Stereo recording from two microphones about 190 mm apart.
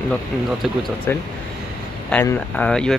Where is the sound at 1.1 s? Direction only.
10° left (ahead or behind).